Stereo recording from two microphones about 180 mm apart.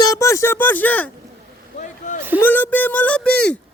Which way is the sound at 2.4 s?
10° left (ahead or behind).